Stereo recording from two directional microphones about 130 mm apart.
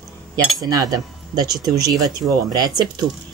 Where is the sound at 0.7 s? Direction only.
30° right (ahead or behind).